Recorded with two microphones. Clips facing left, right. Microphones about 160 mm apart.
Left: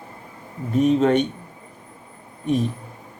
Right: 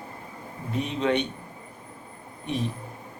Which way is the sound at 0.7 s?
45° left (ahead or behind).